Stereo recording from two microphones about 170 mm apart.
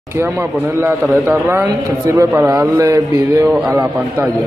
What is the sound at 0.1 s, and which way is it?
A man's voice, 15° right (ahead or behind).